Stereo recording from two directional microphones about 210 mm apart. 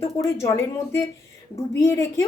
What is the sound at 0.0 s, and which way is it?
A child's voice, 15° left (ahead or behind).